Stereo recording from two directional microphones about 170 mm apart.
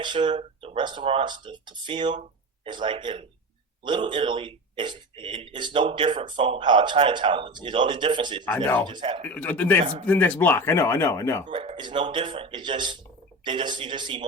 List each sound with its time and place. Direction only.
0.0 s a man's voice: 30° right (ahead or behind)
8.4 s speech: 10° left (ahead or behind)
8.9 s a man's voice: 30° right (ahead or behind)
9.2 s speech: 10° left (ahead or behind)
11.4 s a man's voice: 30° right (ahead or behind)